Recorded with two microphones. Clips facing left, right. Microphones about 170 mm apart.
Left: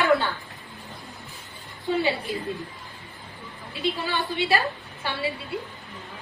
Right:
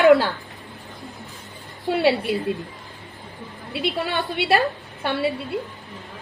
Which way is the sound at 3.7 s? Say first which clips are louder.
Right 3 dB; 65° right (ahead or behind).